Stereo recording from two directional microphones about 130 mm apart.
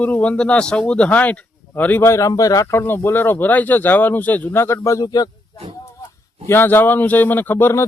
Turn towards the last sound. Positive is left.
turn(degrees=15)  # may be behind; listen again after turning